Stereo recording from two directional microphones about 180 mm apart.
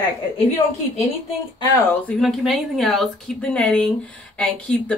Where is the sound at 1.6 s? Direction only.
20° left (ahead or behind).